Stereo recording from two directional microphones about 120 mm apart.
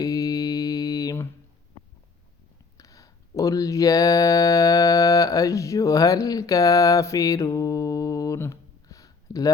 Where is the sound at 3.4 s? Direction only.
30° left (ahead or behind).